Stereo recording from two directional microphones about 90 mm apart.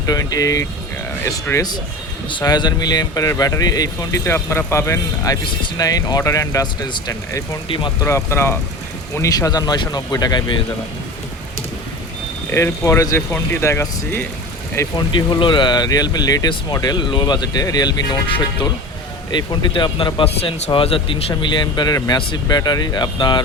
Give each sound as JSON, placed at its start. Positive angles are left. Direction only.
{"t": 0.0, "sound": "speech", "side_deg": 45}
{"t": 2.4, "sound": "speech", "side_deg": 50}
{"t": 4.3, "sound": "speech", "side_deg": 25}
{"t": 7.1, "sound": "speech", "side_deg": 35}
{"t": 7.7, "sound": "speech", "side_deg": 70}
{"t": 8.0, "sound": "speech", "side_deg": 30}
{"t": 9.3, "sound": "speech", "side_deg": 45}
{"t": 12.5, "sound": "speech", "side_deg": 25}
{"t": 14.9, "sound": "speech", "side_deg": 60}
{"t": 18.3, "sound": "speech", "side_deg": 75}
{"t": 19.3, "sound": "speech", "side_deg": 55}